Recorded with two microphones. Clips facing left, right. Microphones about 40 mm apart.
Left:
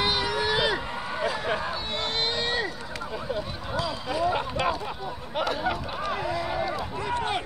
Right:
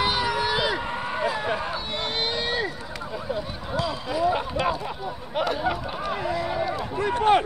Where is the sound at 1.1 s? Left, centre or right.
Centre.